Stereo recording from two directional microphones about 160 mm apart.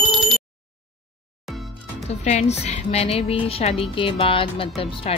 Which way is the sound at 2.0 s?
45° left (ahead or behind).